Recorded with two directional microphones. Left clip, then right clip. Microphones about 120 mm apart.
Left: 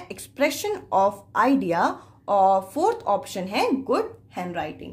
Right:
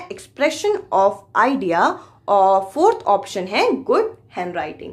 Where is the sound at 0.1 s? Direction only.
30° left (ahead or behind).